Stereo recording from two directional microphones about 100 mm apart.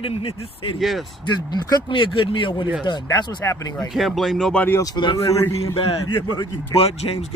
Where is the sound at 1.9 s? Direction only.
55° left (ahead or behind).